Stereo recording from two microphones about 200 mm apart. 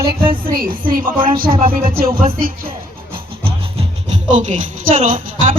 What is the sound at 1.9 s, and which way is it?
Speech, 45° right (ahead or behind).